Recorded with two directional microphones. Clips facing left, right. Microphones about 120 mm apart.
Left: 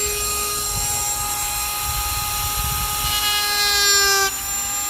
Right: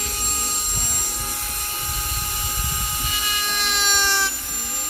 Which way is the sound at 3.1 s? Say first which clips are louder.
Left 1 dB; 70° left (ahead or behind).